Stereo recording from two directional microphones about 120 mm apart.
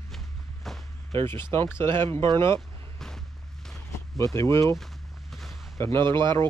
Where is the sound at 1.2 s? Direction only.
20° left (ahead or behind).